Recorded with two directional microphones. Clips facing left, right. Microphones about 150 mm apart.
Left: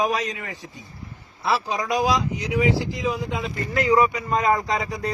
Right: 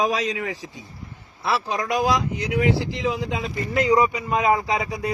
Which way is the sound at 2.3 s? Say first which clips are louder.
Even; 60° right (ahead or behind).